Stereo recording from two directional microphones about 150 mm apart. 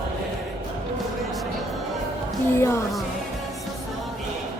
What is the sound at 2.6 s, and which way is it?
Music, 20° left (ahead or behind).